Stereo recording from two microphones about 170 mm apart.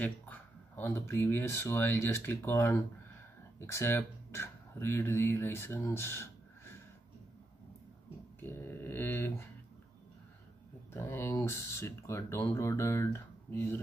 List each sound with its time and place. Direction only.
0.0 s speech: 10° left (ahead or behind)
8.4 s a sound: 10° left (ahead or behind)
10.9 s speech: 15° left (ahead or behind)